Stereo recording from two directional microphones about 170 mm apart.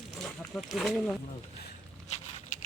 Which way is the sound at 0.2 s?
Centre (ahead or behind).